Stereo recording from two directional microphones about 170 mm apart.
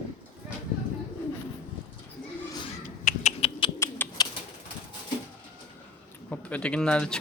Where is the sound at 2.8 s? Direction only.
50° left (ahead or behind).